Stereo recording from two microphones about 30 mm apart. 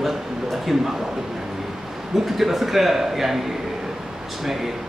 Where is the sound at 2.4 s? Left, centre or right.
Centre.